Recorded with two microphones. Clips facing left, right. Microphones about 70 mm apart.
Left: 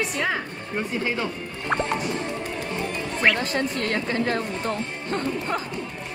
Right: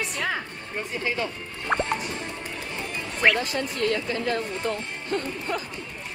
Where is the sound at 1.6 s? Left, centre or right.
Centre.